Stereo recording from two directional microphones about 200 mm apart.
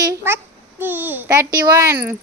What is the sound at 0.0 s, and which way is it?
Babbling, 15° right (ahead or behind).